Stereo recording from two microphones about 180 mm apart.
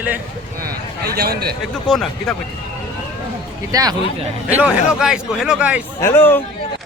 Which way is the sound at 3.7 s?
20° right (ahead or behind).